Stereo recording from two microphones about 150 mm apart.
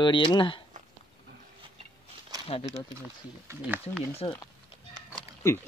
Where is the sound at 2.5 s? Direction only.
45° left (ahead or behind).